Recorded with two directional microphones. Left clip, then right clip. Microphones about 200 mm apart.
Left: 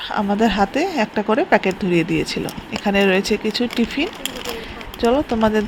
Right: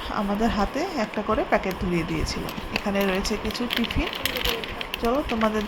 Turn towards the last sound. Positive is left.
turn(degrees=20)  # may be behind; listen again after turning